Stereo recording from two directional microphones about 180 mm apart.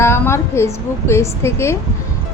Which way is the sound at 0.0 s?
15° left (ahead or behind).